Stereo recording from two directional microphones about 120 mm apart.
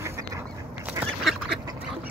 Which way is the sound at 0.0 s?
25° right (ahead or behind).